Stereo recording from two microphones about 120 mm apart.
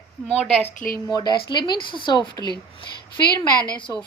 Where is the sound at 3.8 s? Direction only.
40° left (ahead or behind).